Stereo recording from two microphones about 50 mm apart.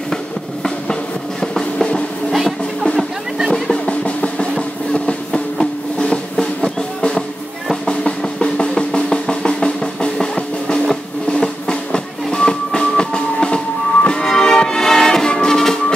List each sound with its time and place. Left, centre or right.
1.4 s music: centre
3.7 s drum: left
11.2 s music: centre